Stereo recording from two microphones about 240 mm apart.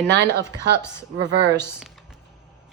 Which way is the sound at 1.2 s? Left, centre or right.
Right.